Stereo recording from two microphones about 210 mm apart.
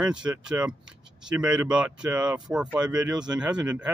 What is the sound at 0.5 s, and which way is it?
Speech, 5° right (ahead or behind).